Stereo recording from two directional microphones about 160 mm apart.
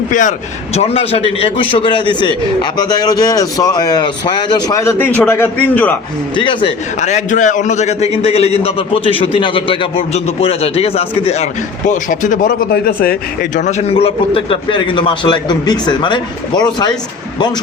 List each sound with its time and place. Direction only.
0.1 s a man's voice: 55° left (ahead or behind); by 4.8 s 25° left (ahead or behind)
4.8 s a man's voice: 15° left (ahead or behind)
6.3 s a man's voice: 30° left (ahead or behind)
7.0 s a man's voice: 50° left (ahead or behind)
11.9 s speech: 55° left (ahead or behind); by 13.1 s 75° left (ahead or behind)
13.6 s a man's voice: 45° left (ahead or behind); by 16.9 s 30° left (ahead or behind)